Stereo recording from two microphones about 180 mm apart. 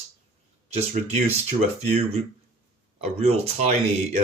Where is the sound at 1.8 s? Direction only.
35° right (ahead or behind).